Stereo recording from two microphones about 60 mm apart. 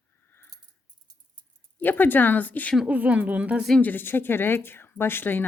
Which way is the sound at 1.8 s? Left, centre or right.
Left.